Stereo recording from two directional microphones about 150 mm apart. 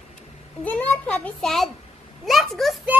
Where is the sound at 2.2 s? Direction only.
Centre (ahead or behind).